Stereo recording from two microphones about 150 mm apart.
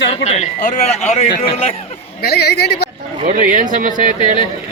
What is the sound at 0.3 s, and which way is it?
Speech, 50° left (ahead or behind).